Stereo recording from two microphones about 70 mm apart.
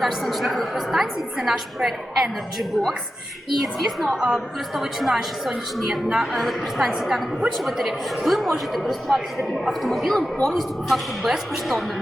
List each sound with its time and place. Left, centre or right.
0.0 s a woman's voice: centre
4.1 s a woman's voice: centre
4.7 s a woman's voice: centre